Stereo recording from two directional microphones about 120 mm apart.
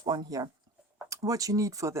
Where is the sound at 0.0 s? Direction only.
35° right (ahead or behind).